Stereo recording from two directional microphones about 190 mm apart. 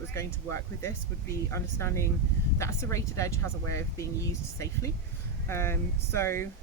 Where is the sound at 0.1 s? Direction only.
15° left (ahead or behind).